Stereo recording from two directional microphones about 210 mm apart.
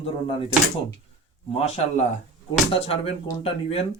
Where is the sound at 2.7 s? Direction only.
25° left (ahead or behind).